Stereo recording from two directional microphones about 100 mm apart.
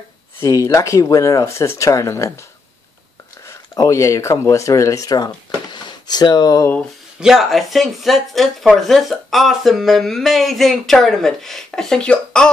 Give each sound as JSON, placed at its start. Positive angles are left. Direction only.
{"t": 0.4, "sound": "speech", "side_deg": 35}
{"t": 3.4, "sound": "speech", "side_deg": 30}
{"t": 7.2, "sound": "speech", "side_deg": -5}